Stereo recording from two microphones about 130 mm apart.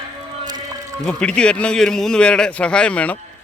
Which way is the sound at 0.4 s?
30° right (ahead or behind).